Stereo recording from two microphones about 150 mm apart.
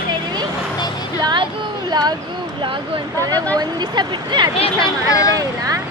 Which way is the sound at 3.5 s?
30° right (ahead or behind).